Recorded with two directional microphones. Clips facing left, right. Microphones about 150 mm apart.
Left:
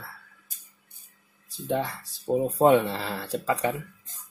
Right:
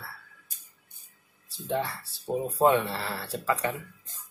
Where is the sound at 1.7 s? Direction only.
20° left (ahead or behind).